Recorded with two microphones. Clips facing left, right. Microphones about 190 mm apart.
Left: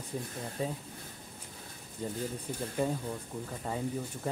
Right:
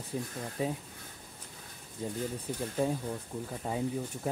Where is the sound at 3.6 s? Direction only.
5° right (ahead or behind).